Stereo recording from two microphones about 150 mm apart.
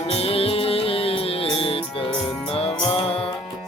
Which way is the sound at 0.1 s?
40° left (ahead or behind).